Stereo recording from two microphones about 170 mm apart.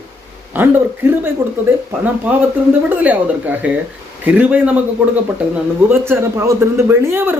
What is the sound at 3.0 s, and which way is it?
A man's voice, 10° right (ahead or behind).